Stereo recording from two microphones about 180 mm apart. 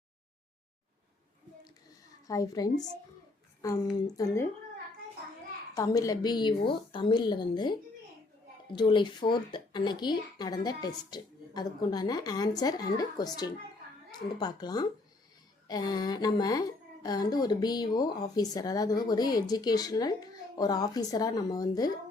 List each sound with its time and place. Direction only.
2.2 s a woman's voice: 20° left (ahead or behind)
5.7 s a woman's voice: 20° left (ahead or behind)